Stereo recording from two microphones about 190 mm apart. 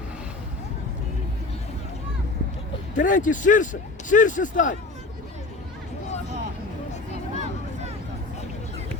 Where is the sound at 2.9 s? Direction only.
40° left (ahead or behind).